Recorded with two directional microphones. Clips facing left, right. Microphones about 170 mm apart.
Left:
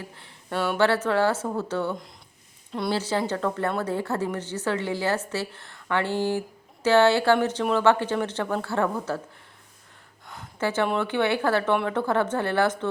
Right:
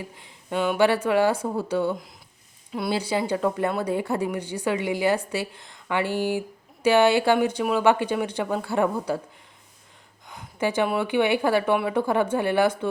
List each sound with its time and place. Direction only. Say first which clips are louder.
0.0 s a woman's voice: right 2 dB; 15° right (ahead or behind)
10.6 s a woman's voice: right 1 dB; 15° right (ahead or behind)